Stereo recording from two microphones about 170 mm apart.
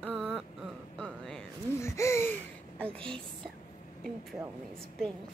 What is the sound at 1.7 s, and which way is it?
Gasp, 15° left (ahead or behind).